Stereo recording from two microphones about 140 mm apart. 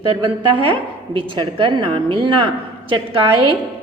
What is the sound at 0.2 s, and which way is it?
A woman's voice, 35° right (ahead or behind).